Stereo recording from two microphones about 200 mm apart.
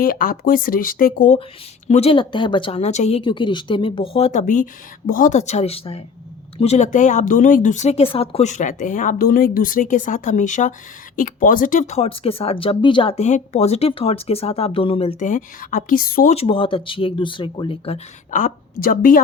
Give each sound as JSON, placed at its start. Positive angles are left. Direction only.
{"t": 0.0, "sound": "speech", "side_deg": 45}
{"t": 15.2, "sound": "speech", "side_deg": 40}
{"t": 16.3, "sound": "speech", "side_deg": 30}